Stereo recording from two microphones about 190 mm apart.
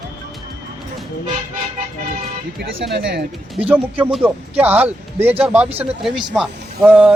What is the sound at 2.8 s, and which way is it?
Speech, 55° right (ahead or behind).